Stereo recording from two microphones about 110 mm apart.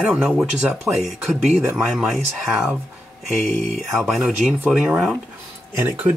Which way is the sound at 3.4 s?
90° right.